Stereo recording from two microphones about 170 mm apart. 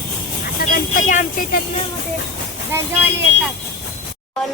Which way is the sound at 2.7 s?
10° right (ahead or behind).